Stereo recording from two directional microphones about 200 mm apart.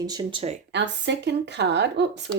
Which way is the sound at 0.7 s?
60° right (ahead or behind).